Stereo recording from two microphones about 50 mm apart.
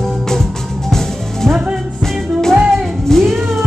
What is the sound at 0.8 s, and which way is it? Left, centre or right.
Music, centre.